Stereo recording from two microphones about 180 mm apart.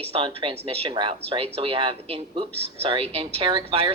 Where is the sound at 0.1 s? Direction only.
30° right (ahead or behind).